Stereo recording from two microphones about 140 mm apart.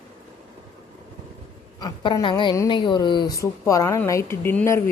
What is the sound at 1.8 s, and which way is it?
A woman's voice, 30° left (ahead or behind).